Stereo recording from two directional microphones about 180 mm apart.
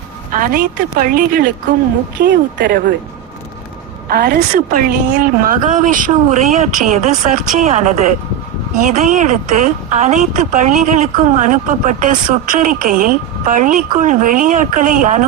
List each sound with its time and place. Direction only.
0.3 s speech: 50° right (ahead or behind)
2.1 s speech: 70° right (ahead or behind)
4.1 s speech: 60° right (ahead or behind)